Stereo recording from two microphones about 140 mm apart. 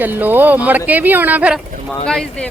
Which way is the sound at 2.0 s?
5° left (ahead or behind).